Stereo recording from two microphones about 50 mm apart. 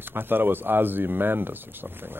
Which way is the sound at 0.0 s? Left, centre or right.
Right.